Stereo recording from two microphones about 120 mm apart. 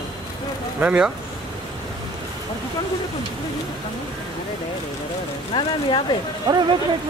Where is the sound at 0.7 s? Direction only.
10° right (ahead or behind).